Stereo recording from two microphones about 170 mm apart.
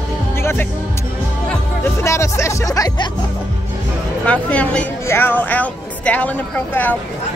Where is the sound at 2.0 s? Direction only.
15° left (ahead or behind).